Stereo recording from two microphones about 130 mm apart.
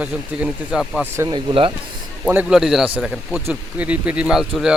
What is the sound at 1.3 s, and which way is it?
Speech, 40° right (ahead or behind).